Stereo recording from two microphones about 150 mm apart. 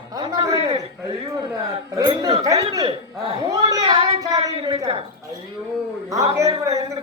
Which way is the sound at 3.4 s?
25° right (ahead or behind).